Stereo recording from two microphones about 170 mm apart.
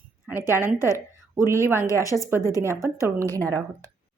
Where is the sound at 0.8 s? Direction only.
20° left (ahead or behind).